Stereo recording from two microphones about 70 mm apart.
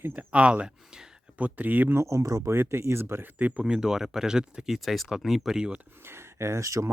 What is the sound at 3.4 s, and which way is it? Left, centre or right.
Speech, right.